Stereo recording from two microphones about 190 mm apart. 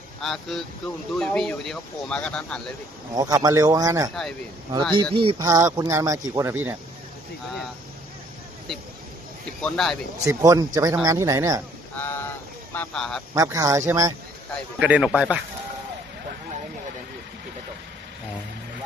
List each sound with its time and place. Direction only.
0.2 s speech: centre (ahead or behind)
3.2 s speech: 20° right (ahead or behind)
4.1 s speech: centre (ahead or behind)
4.7 s speech: 25° right (ahead or behind)
9.6 s speech: 5° left (ahead or behind)
10.2 s speech: 15° right (ahead or behind)
11.9 s a sound: 10° left (ahead or behind)
12.7 s speech: 5° left (ahead or behind)
13.3 s speech: 15° right (ahead or behind)
14.8 s speech: 5° right (ahead or behind)